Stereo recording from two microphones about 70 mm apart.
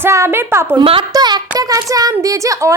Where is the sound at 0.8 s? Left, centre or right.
Right.